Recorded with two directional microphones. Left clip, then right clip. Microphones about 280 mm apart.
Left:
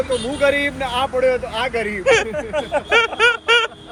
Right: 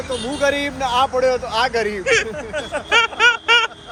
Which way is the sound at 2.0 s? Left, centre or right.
Centre.